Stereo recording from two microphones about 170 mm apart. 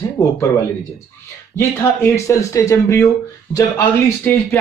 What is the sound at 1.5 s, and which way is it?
Speech, 15° left (ahead or behind).